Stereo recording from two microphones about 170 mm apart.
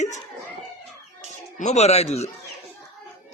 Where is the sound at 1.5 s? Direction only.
40° left (ahead or behind).